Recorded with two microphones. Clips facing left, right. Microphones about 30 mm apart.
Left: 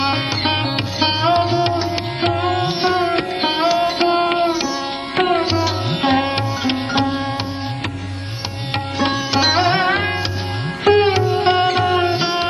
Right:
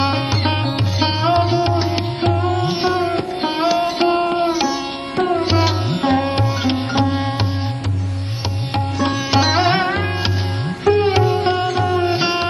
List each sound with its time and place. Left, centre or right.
0.0 s music: left
0.9 s music: centre
2.2 s music: left
3.6 s music: centre
5.1 s music: left
9.4 s sitar: centre
10.8 s sitar: left
11.4 s music: left
12.1 s music: centre